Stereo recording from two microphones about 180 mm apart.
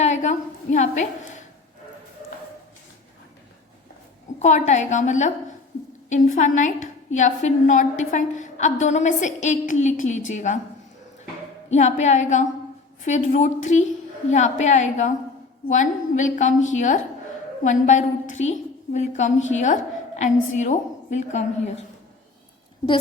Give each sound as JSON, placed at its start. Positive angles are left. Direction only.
{"t": 0.0, "sound": "a woman's voice", "side_deg": 40}
{"t": 4.4, "sound": "a woman's voice", "side_deg": 40}
{"t": 11.7, "sound": "a woman's voice", "side_deg": 40}